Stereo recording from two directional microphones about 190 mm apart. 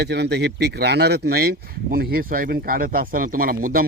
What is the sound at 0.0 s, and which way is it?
A man's voice, 60° right (ahead or behind).